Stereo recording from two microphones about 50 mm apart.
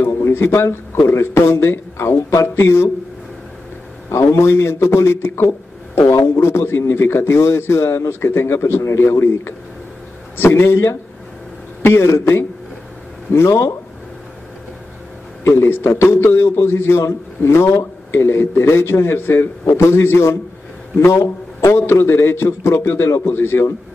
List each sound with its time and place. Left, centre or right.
0.3 s speech: left
2.5 s speech: left
4.1 s speech: left
5.9 s speech: left
13.3 s speech: left
15.4 s speech: left
19.6 s speech: left
23.2 s a man's voice: left